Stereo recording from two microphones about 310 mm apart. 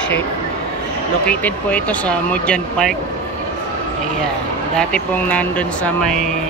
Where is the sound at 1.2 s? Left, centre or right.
Centre.